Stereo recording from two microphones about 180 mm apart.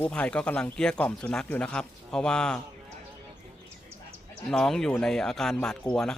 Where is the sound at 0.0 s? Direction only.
5° left (ahead or behind).